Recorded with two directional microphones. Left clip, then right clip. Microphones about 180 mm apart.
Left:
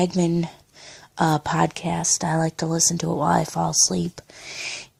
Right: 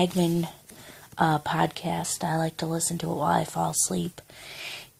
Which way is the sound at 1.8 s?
50° left (ahead or behind).